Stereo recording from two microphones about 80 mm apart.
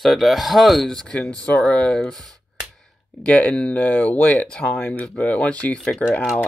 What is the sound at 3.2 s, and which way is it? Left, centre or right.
Speech, centre.